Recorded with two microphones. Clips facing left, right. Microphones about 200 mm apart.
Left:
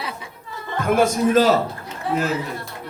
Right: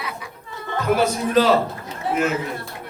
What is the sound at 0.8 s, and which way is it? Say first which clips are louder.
Speech: left 3 dB; 50° left (ahead or behind).